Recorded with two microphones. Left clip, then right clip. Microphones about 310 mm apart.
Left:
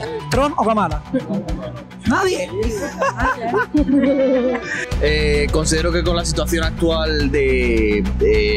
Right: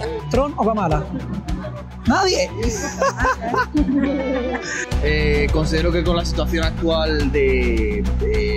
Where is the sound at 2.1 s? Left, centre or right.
Centre.